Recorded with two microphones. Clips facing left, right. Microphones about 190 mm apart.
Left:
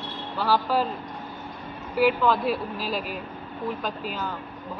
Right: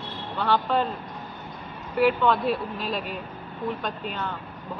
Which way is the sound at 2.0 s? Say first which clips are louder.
Even; centre (ahead or behind).